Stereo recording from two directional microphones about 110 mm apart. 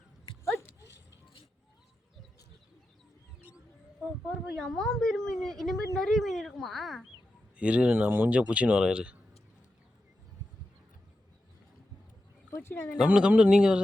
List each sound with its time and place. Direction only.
0.4 s dog: 25° left (ahead or behind)
4.5 s a woman's voice: 5° left (ahead or behind)
7.5 s speech: 10° right (ahead or behind)
12.5 s a sound: 20° left (ahead or behind)
13.0 s speech: 10° right (ahead or behind)